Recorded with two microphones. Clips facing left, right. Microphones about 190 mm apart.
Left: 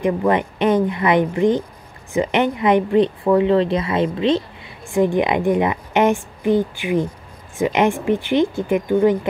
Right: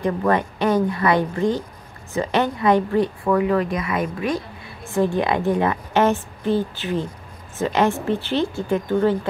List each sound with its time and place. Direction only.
0.0 s a woman's voice: 15° left (ahead or behind)